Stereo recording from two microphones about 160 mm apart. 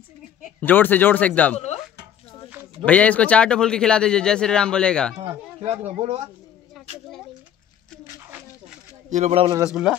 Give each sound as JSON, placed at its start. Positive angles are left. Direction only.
{"t": 0.6, "sound": "speech", "side_deg": 10}
{"t": 2.8, "sound": "speech", "side_deg": 10}
{"t": 5.6, "sound": "speech", "side_deg": -40}
{"t": 9.1, "sound": "speech", "side_deg": -40}
{"t": 9.7, "sound": "speech", "side_deg": -5}